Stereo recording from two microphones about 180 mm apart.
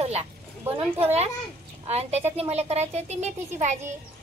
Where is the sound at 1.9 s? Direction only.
35° right (ahead or behind).